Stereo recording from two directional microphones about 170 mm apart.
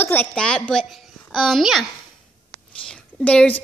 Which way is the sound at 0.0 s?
10° left (ahead or behind).